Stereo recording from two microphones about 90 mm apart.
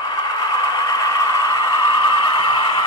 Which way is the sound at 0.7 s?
45° left (ahead or behind).